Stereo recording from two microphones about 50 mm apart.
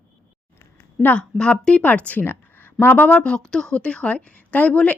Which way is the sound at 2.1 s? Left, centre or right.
Left.